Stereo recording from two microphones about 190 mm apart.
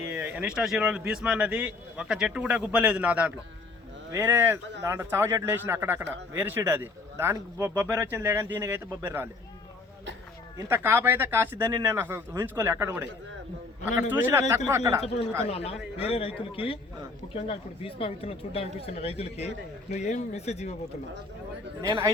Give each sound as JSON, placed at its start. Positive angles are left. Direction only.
{"t": 0.0, "sound": "speech", "side_deg": -10}
{"t": 10.6, "sound": "speech", "side_deg": -15}
{"t": 14.1, "sound": "speech", "side_deg": -10}
{"t": 15.4, "sound": "a man's voice", "side_deg": 30}
{"t": 21.8, "sound": "a man's voice", "side_deg": -20}